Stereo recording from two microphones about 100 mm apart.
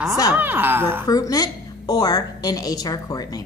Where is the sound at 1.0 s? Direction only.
40° left (ahead or behind).